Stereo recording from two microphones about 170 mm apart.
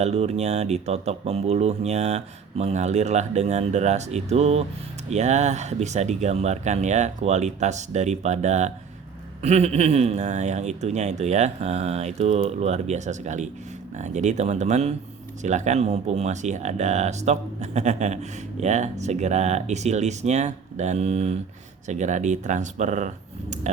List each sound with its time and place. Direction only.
0.0 s speech: 40° right (ahead or behind)